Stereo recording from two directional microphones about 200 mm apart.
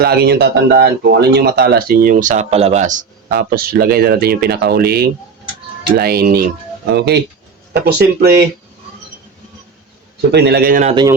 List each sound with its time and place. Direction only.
0.0 s speech: 50° right (ahead or behind); by 3.0 s 35° right (ahead or behind)
3.3 s speech: 50° right (ahead or behind)
10.3 s speech: 55° right (ahead or behind)
10.8 s speech: 20° right (ahead or behind)